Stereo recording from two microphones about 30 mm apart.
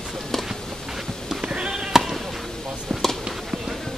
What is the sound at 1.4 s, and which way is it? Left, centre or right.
Sheep, right.